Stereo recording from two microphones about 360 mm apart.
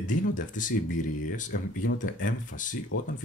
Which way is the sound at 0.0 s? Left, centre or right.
Left.